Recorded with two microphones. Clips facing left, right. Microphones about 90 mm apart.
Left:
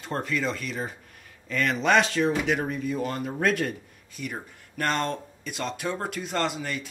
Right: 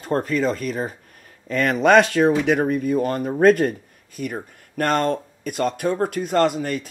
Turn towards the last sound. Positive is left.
turn(degrees=-50)  # may be behind; listen again after turning